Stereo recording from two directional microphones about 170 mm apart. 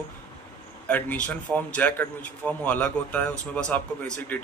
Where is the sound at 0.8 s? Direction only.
10° left (ahead or behind).